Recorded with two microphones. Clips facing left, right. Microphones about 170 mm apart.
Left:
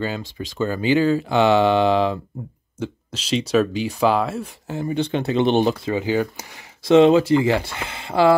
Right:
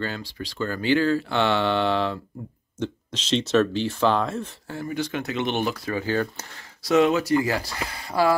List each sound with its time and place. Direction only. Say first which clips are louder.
0.4 s speech: left 5 dB; 20° left (ahead or behind)
4.6 s speech: left 7 dB; 20° left (ahead or behind)
6.8 s speech: left 7 dB; 25° left (ahead or behind)